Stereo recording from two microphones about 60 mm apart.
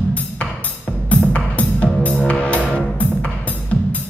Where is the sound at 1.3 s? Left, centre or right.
Left.